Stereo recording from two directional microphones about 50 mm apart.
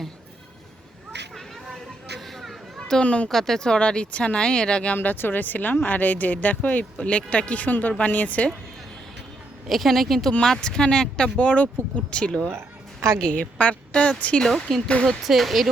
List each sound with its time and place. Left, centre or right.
2.1 s a sound: centre
2.8 s speech: centre
4.9 s speech: left
9.6 s a woman's voice: centre
12.5 s music: right
13.3 s speech: left
14.3 s a woman's voice: centre